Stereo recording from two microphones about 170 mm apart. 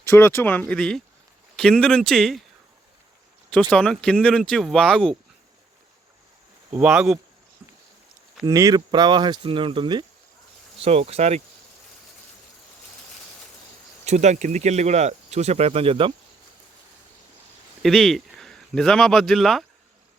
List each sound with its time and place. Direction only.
0.1 s speech: 15° left (ahead or behind)
3.7 s speech: 5° left (ahead or behind)
6.7 s speech: 10° right (ahead or behind)
8.4 s speech: 20° right (ahead or behind); by 11.4 s 40° right (ahead or behind)
14.0 s speech: 40° right (ahead or behind)
17.8 s speech: centre (ahead or behind)